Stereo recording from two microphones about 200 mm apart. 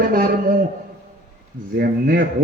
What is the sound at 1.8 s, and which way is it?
Speech, 45° right (ahead or behind).